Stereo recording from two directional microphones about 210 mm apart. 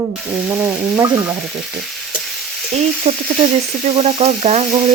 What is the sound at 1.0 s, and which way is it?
Frying, 15° right (ahead or behind).